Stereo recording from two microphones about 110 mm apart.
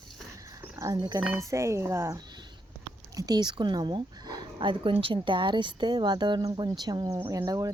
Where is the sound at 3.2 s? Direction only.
35° right (ahead or behind).